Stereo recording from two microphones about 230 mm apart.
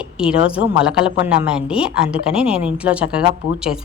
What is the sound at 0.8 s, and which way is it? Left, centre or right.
A woman's voice, centre.